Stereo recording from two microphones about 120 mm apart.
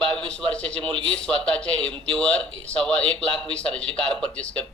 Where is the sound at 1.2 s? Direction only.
10° left (ahead or behind).